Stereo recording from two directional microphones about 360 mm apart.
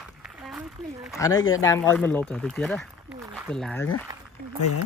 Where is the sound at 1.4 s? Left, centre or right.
Left.